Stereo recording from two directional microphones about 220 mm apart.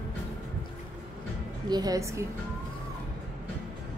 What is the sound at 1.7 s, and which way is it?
Speech, 15° right (ahead or behind).